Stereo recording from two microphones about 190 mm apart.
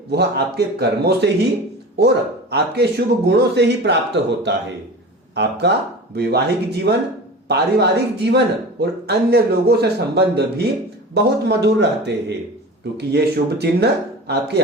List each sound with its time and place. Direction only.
0.1 s speech: 60° right (ahead or behind)
2.5 s speech: 60° right (ahead or behind)